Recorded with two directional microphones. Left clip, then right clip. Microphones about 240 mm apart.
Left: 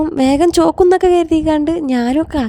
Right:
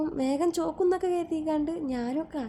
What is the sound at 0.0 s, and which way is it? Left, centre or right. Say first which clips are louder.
A woman's voice: left 14 dB; left.